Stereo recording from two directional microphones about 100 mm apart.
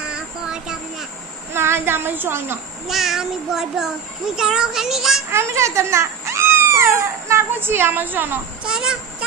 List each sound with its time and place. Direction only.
0.0 s child singing: 10° right (ahead or behind)
1.5 s a woman's voice: 25° right (ahead or behind)
2.9 s child singing: centre (ahead or behind)
5.3 s speech: 30° right (ahead or behind)
8.6 s speech: 5° right (ahead or behind)